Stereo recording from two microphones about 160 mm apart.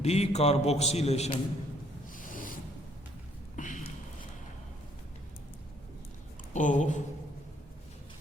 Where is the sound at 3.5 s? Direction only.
50° left (ahead or behind).